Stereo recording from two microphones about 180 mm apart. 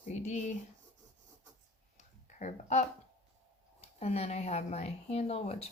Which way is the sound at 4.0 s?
35° left (ahead or behind).